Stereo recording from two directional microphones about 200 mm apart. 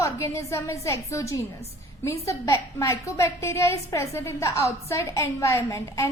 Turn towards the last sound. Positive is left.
turn(degrees=15)  # may be behind; listen again after turning